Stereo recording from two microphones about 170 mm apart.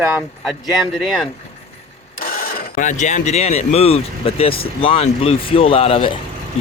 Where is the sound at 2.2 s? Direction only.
55° left (ahead or behind).